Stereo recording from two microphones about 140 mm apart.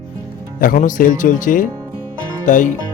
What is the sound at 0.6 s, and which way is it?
Speech, 80° left.